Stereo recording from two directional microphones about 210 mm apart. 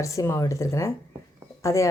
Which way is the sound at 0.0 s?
15° left (ahead or behind).